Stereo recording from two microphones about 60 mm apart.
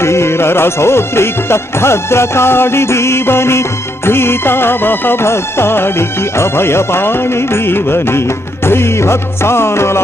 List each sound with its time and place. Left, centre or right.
0.0 s music: left